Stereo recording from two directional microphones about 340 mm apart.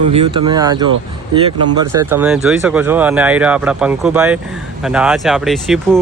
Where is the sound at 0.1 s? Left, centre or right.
Centre.